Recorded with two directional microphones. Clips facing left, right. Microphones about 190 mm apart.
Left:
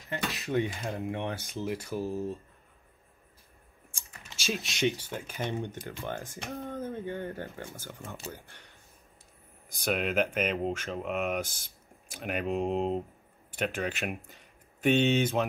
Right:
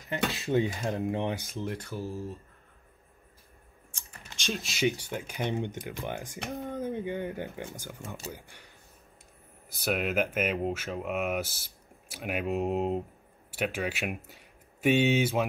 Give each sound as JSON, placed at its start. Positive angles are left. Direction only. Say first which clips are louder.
{"t": 0.3, "sound": "speech", "louder": "right 1 dB", "side_deg": -30}
{"t": 1.5, "sound": "speech", "louder": "left 1 dB", "side_deg": 5}
{"t": 1.9, "sound": "speech", "louder": "left 3 dB", "side_deg": 15}
{"t": 4.4, "sound": "speech", "louder": "even", "side_deg": 0}